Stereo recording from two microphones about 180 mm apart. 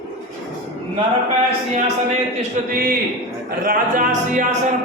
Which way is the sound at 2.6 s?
45° right (ahead or behind).